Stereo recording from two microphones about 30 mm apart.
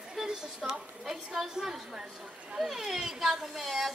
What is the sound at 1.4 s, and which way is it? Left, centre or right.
Speech, centre.